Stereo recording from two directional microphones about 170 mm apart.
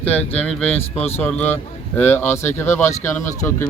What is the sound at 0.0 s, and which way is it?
Speech, 10° left (ahead or behind).